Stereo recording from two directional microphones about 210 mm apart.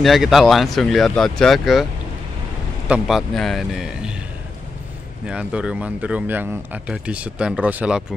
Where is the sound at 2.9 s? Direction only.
Centre (ahead or behind).